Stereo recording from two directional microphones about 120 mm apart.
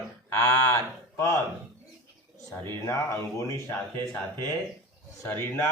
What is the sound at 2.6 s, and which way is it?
Speech, 25° left (ahead or behind).